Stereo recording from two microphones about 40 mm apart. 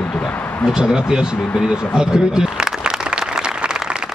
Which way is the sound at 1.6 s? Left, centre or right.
Centre.